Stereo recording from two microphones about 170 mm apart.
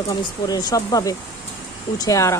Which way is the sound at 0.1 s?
25° left (ahead or behind).